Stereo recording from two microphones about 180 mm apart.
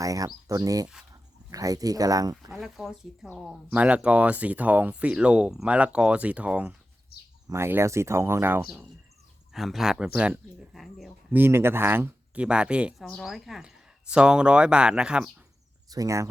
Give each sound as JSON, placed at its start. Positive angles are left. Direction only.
{"t": 0.0, "sound": "speech", "side_deg": -20}
{"t": 2.5, "sound": "speech", "side_deg": 0}
{"t": 9.5, "sound": "speech", "side_deg": 0}
{"t": 11.3, "sound": "speech", "side_deg": -10}
{"t": 15.9, "sound": "speech", "side_deg": -20}